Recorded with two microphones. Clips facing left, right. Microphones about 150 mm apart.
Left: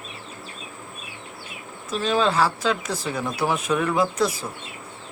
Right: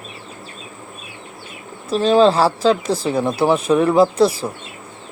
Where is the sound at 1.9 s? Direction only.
30° right (ahead or behind).